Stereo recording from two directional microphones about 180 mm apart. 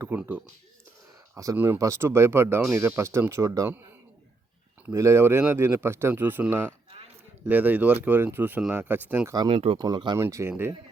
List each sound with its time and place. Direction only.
0.0 s speech: 10° right (ahead or behind)
4.9 s speech: 15° right (ahead or behind)
9.3 s speech: 25° right (ahead or behind)